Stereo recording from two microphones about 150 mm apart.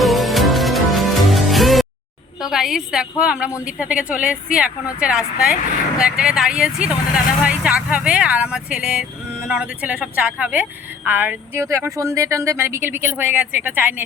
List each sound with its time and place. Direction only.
0.0 s music: centre (ahead or behind)
2.4 s a woman's voice: centre (ahead or behind)